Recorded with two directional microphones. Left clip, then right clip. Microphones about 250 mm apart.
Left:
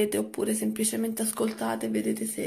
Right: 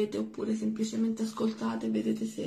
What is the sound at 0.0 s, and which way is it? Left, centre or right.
Speech, left.